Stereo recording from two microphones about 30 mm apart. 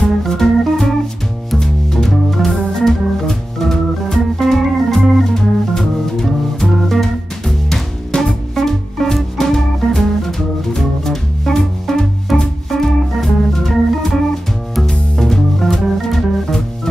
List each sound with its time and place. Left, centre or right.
0.0 s organ: centre
1.6 s music: centre
2.0 s organ: centre
5.3 s music: centre
12.4 s organ: centre
14.9 s music: centre